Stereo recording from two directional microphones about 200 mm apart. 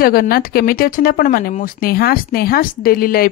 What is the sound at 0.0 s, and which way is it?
Speech, 45° left (ahead or behind).